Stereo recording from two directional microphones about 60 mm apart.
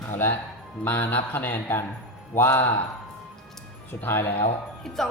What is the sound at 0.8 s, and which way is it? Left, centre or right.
Speech, left.